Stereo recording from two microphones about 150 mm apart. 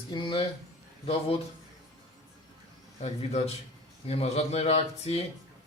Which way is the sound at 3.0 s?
45° left (ahead or behind).